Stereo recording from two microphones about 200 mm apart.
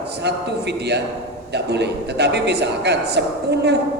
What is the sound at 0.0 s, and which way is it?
A man's voice, 55° right (ahead or behind).